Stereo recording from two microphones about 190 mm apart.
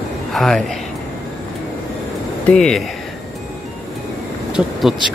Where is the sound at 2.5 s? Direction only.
5° left (ahead or behind).